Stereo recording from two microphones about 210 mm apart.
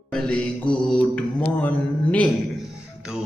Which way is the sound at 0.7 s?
5° left (ahead or behind).